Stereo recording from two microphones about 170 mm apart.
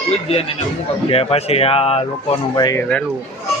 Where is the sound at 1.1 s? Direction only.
35° left (ahead or behind).